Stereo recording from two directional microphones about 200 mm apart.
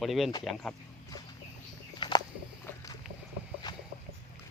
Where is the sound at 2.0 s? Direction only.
20° left (ahead or behind).